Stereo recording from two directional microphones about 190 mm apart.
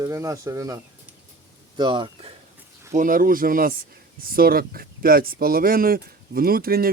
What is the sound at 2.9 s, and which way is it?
Speech, 45° right (ahead or behind).